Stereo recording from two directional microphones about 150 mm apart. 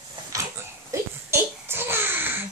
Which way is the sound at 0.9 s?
15° right (ahead or behind).